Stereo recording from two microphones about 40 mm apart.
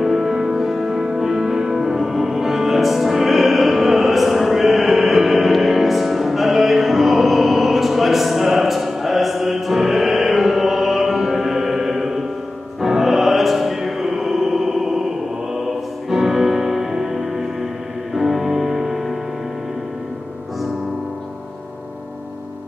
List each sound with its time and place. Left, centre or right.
0.0 s music: centre
16.1 s music: centre